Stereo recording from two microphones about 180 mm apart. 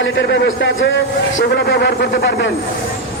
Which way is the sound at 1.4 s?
65° left (ahead or behind).